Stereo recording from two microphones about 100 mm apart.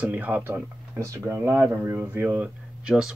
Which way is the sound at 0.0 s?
15° right (ahead or behind).